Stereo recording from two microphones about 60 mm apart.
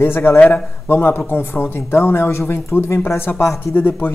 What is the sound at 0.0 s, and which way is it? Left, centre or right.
Speech, left.